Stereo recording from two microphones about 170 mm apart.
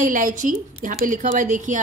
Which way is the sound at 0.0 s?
50° right (ahead or behind).